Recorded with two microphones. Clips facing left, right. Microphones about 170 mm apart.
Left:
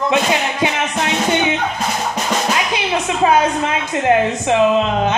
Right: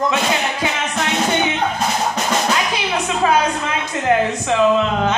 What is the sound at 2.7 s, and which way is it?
Music, 20° left (ahead or behind).